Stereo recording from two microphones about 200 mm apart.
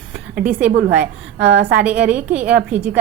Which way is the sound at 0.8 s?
65° right (ahead or behind).